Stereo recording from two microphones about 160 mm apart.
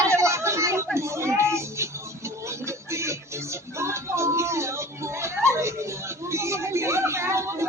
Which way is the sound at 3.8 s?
15° right (ahead or behind).